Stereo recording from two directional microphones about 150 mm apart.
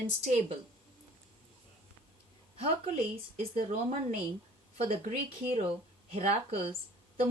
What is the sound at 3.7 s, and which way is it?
Speech, 45° right (ahead or behind).